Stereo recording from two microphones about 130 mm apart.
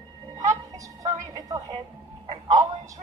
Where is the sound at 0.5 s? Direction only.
25° right (ahead or behind).